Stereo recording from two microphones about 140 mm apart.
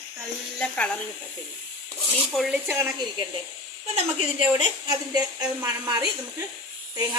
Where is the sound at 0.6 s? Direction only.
10° left (ahead or behind).